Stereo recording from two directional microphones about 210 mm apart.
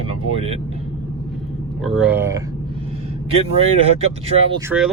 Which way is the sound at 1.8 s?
Centre (ahead or behind).